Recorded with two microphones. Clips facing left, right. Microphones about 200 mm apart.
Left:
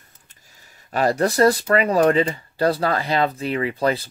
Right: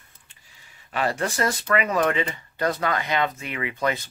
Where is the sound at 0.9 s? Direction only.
40° left (ahead or behind).